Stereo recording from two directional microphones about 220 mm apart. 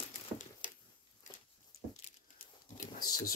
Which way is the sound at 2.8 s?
40° left (ahead or behind).